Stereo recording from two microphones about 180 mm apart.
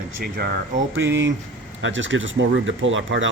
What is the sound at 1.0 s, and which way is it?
Speech, 80° right.